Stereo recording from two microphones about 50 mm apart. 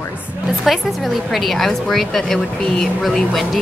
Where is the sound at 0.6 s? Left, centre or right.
Centre.